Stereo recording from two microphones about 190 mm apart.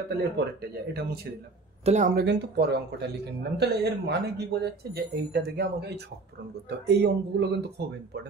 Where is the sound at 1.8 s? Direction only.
40° right (ahead or behind).